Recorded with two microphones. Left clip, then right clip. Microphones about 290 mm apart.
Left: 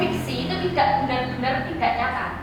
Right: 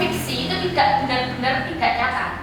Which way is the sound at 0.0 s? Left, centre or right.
Centre.